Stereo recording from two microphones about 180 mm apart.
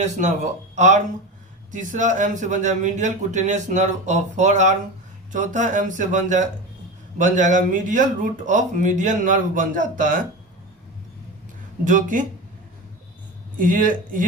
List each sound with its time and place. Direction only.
0.0 s a man's voice: 40° right (ahead or behind)
11.9 s speech: 45° right (ahead or behind)
13.6 s speech: 50° right (ahead or behind)